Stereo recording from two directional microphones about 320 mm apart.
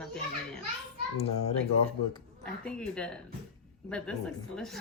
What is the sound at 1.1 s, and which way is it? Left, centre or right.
Speech, centre.